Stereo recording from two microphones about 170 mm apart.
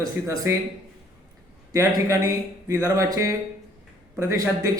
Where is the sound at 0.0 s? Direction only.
15° right (ahead or behind).